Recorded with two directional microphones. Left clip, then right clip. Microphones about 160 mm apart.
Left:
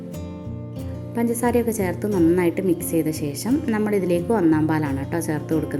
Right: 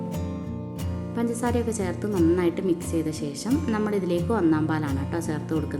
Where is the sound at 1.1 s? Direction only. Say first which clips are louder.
Left 6 dB; 25° left (ahead or behind).